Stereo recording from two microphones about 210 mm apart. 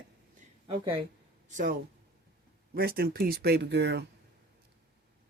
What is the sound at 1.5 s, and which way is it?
Speech, 45° right (ahead or behind).